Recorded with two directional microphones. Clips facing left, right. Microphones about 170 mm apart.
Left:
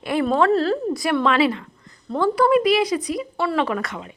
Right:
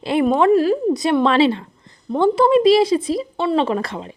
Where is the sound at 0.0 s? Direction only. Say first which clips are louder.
Right 3 dB; 25° right (ahead or behind).